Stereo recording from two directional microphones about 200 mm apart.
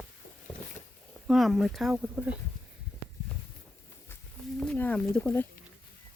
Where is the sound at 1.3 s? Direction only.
Centre (ahead or behind).